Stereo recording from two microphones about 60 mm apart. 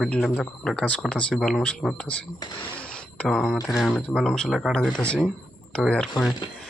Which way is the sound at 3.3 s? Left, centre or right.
Centre.